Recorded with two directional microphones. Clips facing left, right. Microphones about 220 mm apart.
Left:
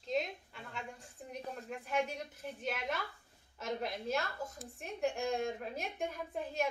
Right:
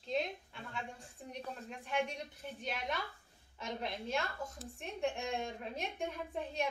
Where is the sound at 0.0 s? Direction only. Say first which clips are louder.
Left 1 dB; centre (ahead or behind).